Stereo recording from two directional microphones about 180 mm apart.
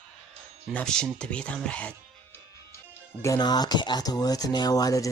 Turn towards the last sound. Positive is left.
turn(degrees=20)  # may be behind; listen again after turning